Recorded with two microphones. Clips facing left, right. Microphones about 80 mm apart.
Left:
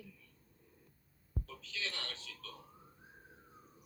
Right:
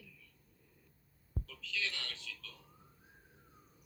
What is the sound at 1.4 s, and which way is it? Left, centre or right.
Speech, left.